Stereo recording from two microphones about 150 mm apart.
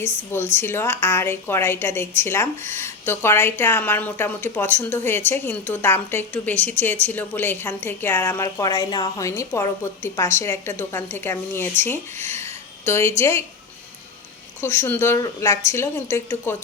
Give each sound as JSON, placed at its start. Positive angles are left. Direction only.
{"t": 0.0, "sound": "a woman's voice", "side_deg": 15}
{"t": 14.6, "sound": "a woman's voice", "side_deg": 15}